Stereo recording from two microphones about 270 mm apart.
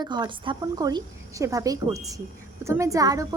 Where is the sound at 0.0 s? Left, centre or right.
Centre.